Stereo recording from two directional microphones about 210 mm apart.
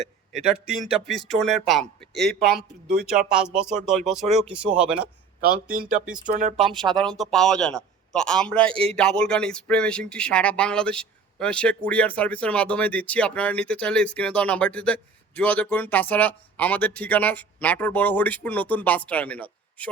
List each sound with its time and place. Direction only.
0.0 s a sound: centre (ahead or behind)
0.7 s a man's voice: centre (ahead or behind)
5.4 s speech: 45° right (ahead or behind)
6.8 s a man's voice: 5° left (ahead or behind)